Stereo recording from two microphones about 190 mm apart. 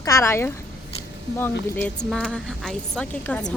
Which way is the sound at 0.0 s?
15° left (ahead or behind).